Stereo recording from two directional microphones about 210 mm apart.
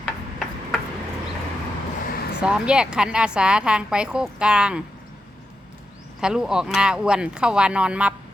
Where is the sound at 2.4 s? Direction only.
5° right (ahead or behind).